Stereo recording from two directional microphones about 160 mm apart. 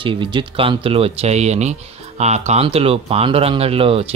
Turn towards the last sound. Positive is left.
turn(degrees=-35)  # may be behind; listen again after turning